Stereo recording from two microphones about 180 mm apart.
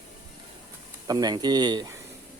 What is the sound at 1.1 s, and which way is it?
Speech, 20° right (ahead or behind).